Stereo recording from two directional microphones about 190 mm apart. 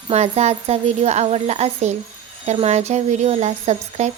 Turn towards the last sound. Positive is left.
turn(degrees=-35)  # may be behind; listen again after turning